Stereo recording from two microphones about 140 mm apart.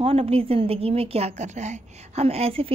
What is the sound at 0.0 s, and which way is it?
A woman's voice, 45° right (ahead or behind).